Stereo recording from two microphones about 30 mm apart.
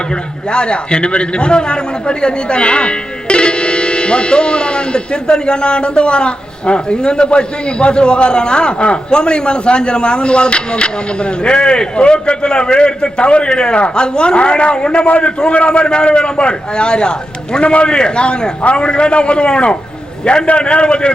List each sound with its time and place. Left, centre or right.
0.5 s a man's voice: left
15.0 s a man's voice: left